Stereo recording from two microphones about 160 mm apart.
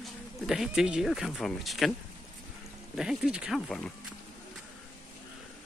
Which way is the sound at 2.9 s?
5° right (ahead or behind).